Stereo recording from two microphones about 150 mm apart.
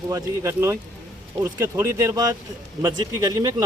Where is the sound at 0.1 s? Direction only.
20° right (ahead or behind).